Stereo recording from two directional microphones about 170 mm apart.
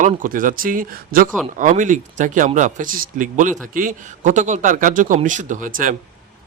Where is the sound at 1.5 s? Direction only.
50° right (ahead or behind).